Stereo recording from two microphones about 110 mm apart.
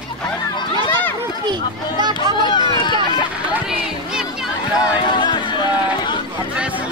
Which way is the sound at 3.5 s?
5° right (ahead or behind).